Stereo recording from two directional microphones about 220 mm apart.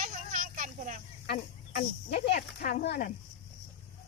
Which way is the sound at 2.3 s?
40° left (ahead or behind).